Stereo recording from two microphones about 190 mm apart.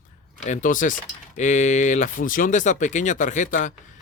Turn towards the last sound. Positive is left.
turn(degrees=40)  # may be behind; listen again after turning